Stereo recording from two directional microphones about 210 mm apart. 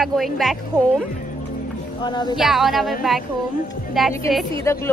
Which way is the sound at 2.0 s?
20° left (ahead or behind).